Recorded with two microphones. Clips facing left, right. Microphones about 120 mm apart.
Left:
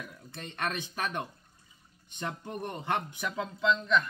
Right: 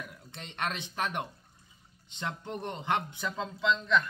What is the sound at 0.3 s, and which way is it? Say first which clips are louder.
Speech: left 1 dB; 20° right (ahead or behind).